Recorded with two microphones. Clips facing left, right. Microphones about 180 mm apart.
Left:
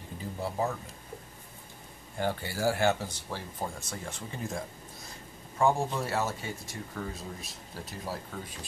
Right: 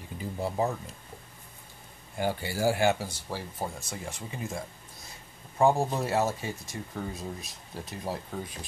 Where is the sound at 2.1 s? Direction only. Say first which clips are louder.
Right 2 dB; 15° right (ahead or behind).